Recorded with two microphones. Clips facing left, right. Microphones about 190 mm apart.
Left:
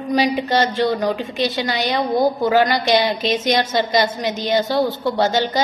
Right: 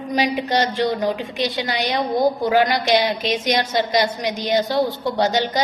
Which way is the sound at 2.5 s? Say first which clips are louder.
Left 1 dB; 15° right (ahead or behind).